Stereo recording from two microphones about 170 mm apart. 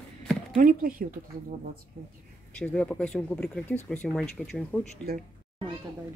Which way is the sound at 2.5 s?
5° left (ahead or behind).